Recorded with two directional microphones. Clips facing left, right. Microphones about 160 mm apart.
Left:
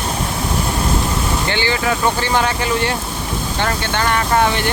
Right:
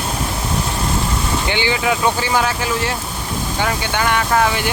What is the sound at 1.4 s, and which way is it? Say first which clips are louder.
Speech: right 1 dB; 15° right (ahead or behind).